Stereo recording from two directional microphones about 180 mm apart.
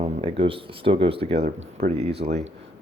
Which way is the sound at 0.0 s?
30° right (ahead or behind).